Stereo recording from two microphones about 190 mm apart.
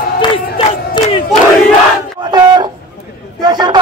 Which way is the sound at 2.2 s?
20° right (ahead or behind).